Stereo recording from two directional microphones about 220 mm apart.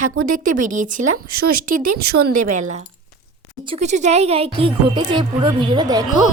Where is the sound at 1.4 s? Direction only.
75° right (ahead or behind).